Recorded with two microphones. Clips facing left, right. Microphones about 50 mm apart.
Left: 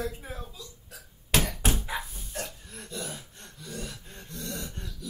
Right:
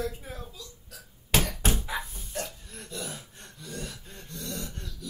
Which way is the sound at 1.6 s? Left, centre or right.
Centre.